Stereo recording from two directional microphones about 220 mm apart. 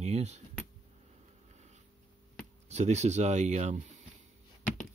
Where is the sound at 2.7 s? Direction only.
30° right (ahead or behind).